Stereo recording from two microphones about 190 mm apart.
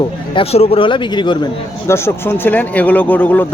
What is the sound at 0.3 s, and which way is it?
Speech, 30° left (ahead or behind).